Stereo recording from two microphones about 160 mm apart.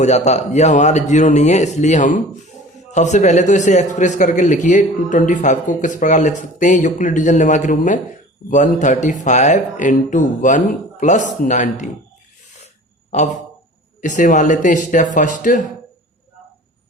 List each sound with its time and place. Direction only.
0.0 s speech: 45° left (ahead or behind)
14.0 s speech: 50° left (ahead or behind)